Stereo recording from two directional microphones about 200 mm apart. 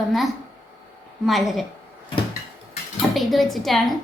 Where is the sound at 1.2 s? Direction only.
Centre (ahead or behind).